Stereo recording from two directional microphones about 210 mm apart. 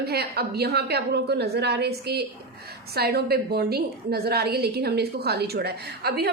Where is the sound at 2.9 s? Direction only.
50° right (ahead or behind).